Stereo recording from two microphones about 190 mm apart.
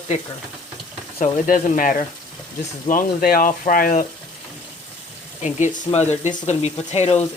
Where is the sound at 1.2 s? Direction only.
45° left (ahead or behind).